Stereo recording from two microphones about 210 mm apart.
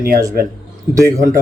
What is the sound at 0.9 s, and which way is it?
Speech, 10° right (ahead or behind).